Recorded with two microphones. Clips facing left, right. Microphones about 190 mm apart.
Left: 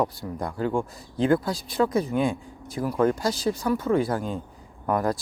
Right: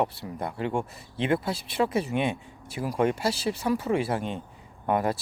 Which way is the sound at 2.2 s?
70° right (ahead or behind).